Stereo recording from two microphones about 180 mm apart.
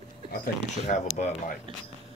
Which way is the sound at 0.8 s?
40° left (ahead or behind).